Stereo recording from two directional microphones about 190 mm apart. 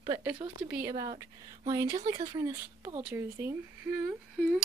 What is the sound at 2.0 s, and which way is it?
Speech, 30° right (ahead or behind).